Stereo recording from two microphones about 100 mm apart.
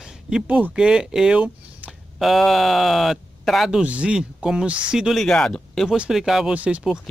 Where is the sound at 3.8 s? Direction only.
10° right (ahead or behind); by 5.9 s 5° left (ahead or behind).